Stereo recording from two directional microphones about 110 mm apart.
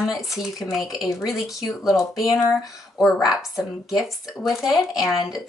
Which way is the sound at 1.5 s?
Centre (ahead or behind).